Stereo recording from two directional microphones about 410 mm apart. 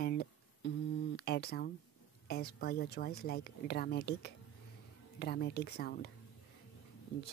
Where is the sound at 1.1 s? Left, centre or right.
Left.